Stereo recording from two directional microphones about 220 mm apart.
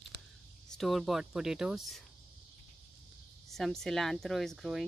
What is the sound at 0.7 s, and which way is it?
Speech, centre (ahead or behind).